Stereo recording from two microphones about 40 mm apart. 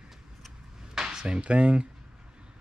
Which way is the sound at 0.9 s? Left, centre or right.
Centre.